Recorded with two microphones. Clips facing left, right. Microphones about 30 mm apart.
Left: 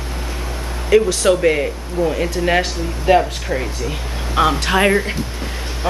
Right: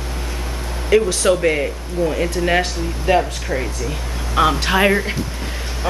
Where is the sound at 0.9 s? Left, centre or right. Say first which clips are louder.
Left 1 dB; centre.